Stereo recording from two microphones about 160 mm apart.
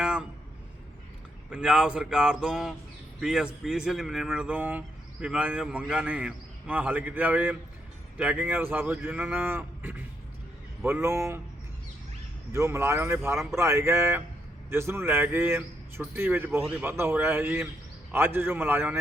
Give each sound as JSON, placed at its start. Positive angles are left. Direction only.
{"t": 0.0, "sound": "a sound", "side_deg": -5}
{"t": 1.5, "sound": "a man's voice", "side_deg": -5}
{"t": 12.5, "sound": "a man's voice", "side_deg": -20}